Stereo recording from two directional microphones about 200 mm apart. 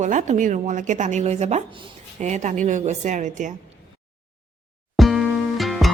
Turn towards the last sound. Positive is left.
turn(degrees=0)  # may be behind; listen again after turning